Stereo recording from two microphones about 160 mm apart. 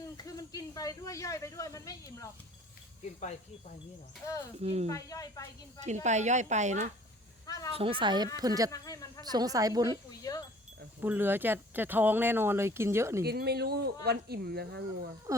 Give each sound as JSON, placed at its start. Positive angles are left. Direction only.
{"t": 0.3, "sound": "speech", "side_deg": 20}
{"t": 4.6, "sound": "speech", "side_deg": -40}
{"t": 4.9, "sound": "speech", "side_deg": 20}
{"t": 5.8, "sound": "speech", "side_deg": -45}
{"t": 7.4, "sound": "a sound", "side_deg": 20}
{"t": 7.8, "sound": "speech", "side_deg": -35}
{"t": 8.7, "sound": "speech", "side_deg": 20}
{"t": 9.3, "sound": "speech", "side_deg": -25}
{"t": 11.0, "sound": "speech", "side_deg": -10}
{"t": 13.2, "sound": "speech", "side_deg": -80}